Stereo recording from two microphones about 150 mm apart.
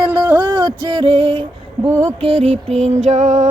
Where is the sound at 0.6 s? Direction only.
30° right (ahead or behind).